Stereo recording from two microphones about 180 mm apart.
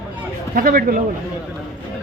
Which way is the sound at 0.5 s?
55° right (ahead or behind).